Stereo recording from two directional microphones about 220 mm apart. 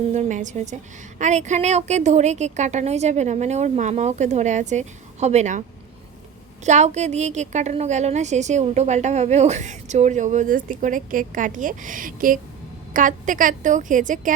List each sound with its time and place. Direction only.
0.1 s a woman's voice: 35° right (ahead or behind)
6.7 s a woman's voice: 30° right (ahead or behind)